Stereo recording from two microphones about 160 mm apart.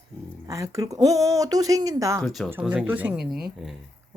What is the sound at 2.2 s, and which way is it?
Speech, centre (ahead or behind).